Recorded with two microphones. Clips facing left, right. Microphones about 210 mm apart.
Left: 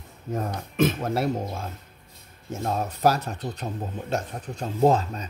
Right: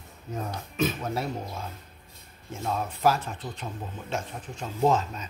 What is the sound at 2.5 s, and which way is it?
Speech, 40° left (ahead or behind).